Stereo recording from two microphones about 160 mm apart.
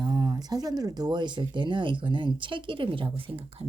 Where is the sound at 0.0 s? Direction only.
25° right (ahead or behind).